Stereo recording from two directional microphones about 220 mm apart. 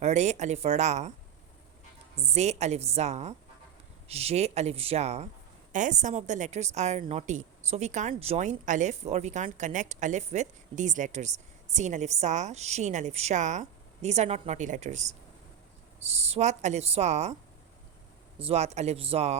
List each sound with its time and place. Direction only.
0.0 s a woman's voice: 30° right (ahead or behind)
2.1 s a woman's voice: 30° right (ahead or behind)
18.3 s speech: 30° right (ahead or behind)